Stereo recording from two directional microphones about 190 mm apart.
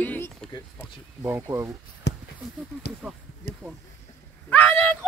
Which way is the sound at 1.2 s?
10° right (ahead or behind).